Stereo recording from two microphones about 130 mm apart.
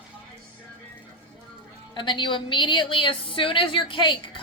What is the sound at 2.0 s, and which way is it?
A woman's voice, 40° left (ahead or behind).